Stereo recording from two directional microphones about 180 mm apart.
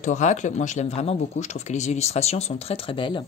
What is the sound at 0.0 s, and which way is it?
Speech, 40° left (ahead or behind).